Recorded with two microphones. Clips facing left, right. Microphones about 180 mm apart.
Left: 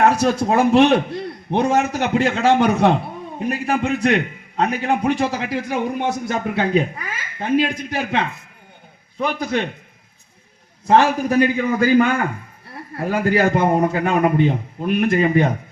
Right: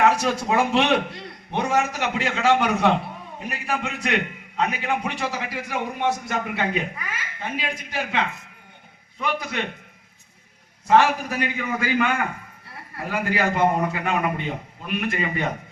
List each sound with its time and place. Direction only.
0.0 s a man's voice: 50° left (ahead or behind)
6.2 s a man's voice: 35° left (ahead or behind); by 8.2 s 50° left (ahead or behind)
9.1 s a man's voice: 35° left (ahead or behind)
11.3 s a man's voice: 40° left (ahead or behind)